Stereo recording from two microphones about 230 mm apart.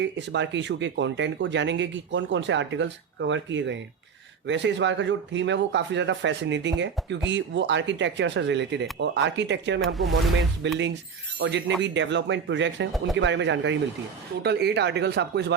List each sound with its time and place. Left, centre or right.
0.0 s speech: right
9.8 s speech: centre
10.6 s speech: right